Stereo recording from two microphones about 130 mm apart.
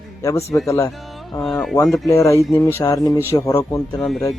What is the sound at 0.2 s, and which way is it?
Speech, 25° left (ahead or behind).